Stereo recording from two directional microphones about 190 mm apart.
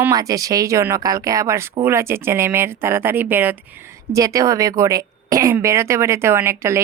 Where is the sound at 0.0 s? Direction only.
20° right (ahead or behind).